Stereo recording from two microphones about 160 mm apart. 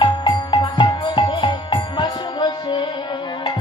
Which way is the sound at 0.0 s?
30° left (ahead or behind).